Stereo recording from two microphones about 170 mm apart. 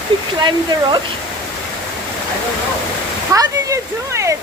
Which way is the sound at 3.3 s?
20° right (ahead or behind).